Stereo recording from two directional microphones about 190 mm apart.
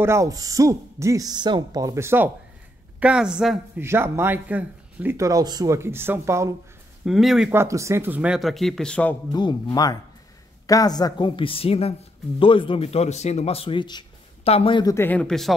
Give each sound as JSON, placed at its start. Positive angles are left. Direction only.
{"t": 0.0, "sound": "speech", "side_deg": -15}
{"t": 7.1, "sound": "speech", "side_deg": 0}
{"t": 9.3, "sound": "speech", "side_deg": 20}